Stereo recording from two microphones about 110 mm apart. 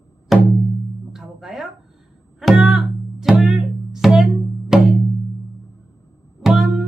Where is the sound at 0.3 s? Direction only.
Centre (ahead or behind).